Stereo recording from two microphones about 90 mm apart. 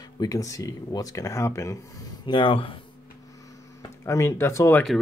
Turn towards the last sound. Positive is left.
turn(degrees=30)  # may be behind; listen again after turning